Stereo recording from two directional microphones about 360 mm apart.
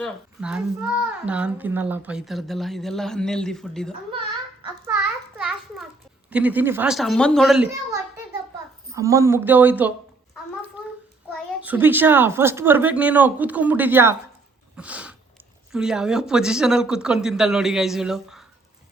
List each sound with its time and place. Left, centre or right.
0.0 s a woman's voice: centre
4.6 s children playing: centre
6.3 s a woman's voice: centre
11.3 s a woman's voice: centre